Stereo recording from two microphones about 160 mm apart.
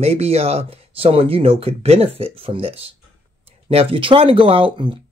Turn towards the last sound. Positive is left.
turn(degrees=-30)  # may be behind; listen again after turning